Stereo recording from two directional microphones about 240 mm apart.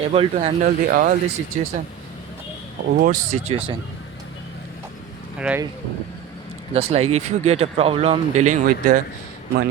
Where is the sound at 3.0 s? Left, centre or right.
Right.